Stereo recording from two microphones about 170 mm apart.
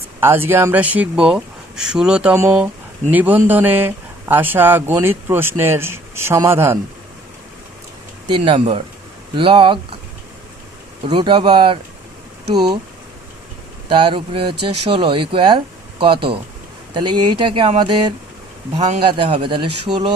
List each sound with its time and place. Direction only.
0.2 s speech: 15° right (ahead or behind)
8.4 s speech: 30° right (ahead or behind)
11.0 s speech: 30° right (ahead or behind)
13.8 s speech: 30° right (ahead or behind)